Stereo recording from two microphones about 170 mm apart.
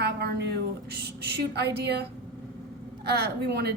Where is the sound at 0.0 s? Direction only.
75° right (ahead or behind).